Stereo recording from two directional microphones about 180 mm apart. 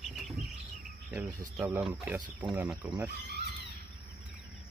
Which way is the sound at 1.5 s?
5° right (ahead or behind).